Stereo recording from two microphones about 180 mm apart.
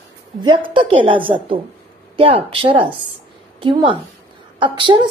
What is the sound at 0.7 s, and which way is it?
A woman's voice, 30° right (ahead or behind).